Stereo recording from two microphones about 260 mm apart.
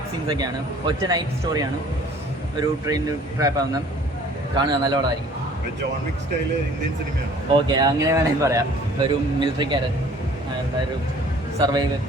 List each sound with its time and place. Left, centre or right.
0.3 s speech: centre
7.7 s speech: centre
11.6 s speech: centre